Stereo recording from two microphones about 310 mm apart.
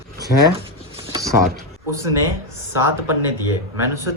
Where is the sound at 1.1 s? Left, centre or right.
Centre.